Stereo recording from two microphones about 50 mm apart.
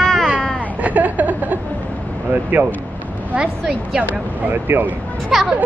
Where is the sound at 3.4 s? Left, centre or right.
Centre.